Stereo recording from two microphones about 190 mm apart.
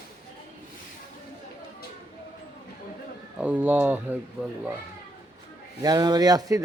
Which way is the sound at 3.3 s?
5° right (ahead or behind).